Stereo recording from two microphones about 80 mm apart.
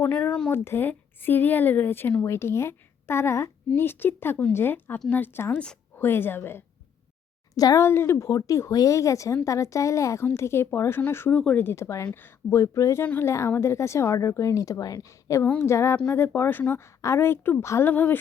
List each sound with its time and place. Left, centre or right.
0.0 s speech: left
7.5 s speech: left
7.8 s speech: left
8.3 s speech: left
11.3 s speech: centre
11.6 s speech: left
12.5 s speech: left
17.8 s speech: left